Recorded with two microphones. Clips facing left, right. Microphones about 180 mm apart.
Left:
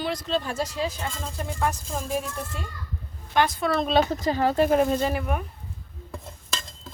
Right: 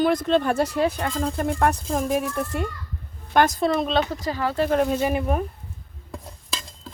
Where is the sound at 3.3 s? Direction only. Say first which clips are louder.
Right 4 dB; 45° right (ahead or behind).